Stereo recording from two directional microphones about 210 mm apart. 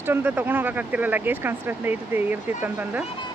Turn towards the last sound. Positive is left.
turn(degrees=-10)  # may be behind; listen again after turning